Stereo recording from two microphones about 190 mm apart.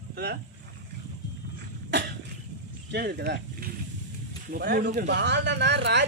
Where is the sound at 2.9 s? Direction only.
60° right (ahead or behind).